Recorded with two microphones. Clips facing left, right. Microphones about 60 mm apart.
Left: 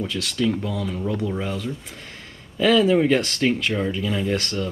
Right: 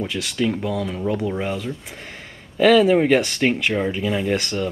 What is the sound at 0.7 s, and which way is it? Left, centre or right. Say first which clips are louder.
Speech: right 3 dB; centre.